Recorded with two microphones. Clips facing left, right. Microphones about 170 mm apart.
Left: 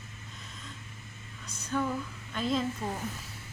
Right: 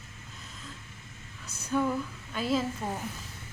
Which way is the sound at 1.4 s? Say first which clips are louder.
Right 3 dB; 10° right (ahead or behind).